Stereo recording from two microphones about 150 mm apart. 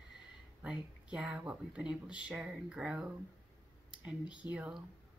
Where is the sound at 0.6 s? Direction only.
10° right (ahead or behind).